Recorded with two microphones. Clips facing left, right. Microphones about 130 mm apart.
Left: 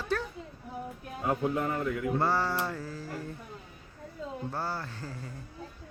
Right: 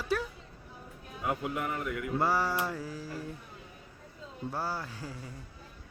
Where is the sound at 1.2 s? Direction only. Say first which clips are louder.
Left 4 dB; 30° left (ahead or behind).